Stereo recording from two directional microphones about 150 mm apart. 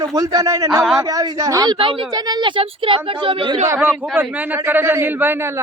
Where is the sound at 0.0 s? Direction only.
25° right (ahead or behind).